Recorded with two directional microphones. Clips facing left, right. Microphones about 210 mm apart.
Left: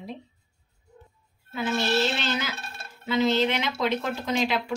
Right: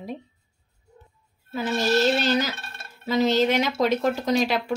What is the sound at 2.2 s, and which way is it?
A woman's voice, 40° right (ahead or behind).